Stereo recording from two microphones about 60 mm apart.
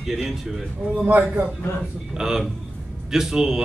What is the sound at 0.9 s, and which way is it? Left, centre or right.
Speech, right.